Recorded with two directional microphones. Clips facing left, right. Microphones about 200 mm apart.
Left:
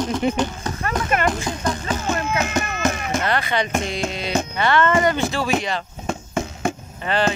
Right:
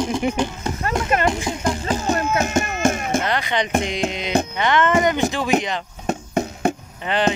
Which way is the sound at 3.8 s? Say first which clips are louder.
Right 2 dB; 15° right (ahead or behind).